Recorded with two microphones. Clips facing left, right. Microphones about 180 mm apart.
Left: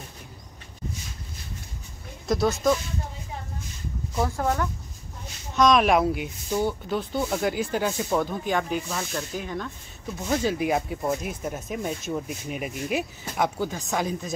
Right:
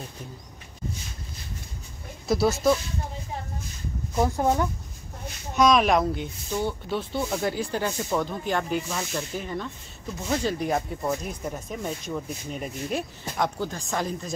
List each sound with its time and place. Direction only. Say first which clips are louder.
2.2 s speech: right 1 dB; 5° right (ahead or behind)
4.2 s speech: right 3 dB; 20° right (ahead or behind)
5.6 s speech: left 1 dB; centre (ahead or behind)